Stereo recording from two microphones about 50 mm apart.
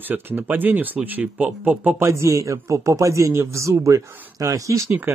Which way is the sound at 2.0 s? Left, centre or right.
Right.